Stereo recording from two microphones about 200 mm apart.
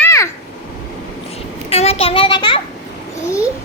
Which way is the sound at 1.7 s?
30° left (ahead or behind).